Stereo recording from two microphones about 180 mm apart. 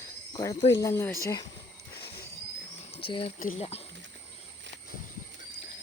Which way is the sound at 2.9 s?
30° left (ahead or behind).